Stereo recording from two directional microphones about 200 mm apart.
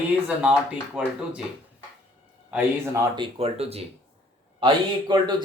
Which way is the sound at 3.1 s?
30° right (ahead or behind).